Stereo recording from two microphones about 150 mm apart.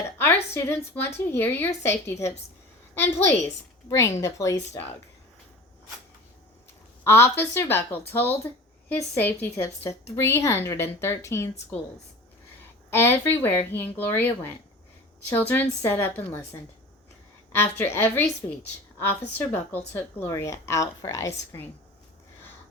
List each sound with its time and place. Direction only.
0.5 s a woman's voice: 20° left (ahead or behind)
7.0 s a woman's voice: 15° left (ahead or behind)
12.9 s a woman's voice: 15° left (ahead or behind)